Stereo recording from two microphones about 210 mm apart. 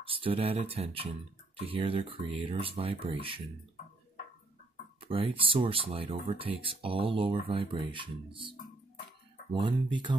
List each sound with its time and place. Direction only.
0.0 s speech: 25° right (ahead or behind)
5.0 s speech: 25° right (ahead or behind)